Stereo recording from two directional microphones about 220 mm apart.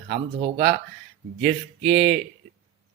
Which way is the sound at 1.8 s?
Centre (ahead or behind).